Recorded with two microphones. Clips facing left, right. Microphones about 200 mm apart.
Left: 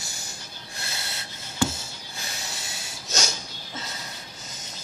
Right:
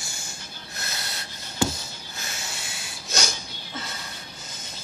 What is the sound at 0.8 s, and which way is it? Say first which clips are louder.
Snort: right 1 dB; 25° left (ahead or behind).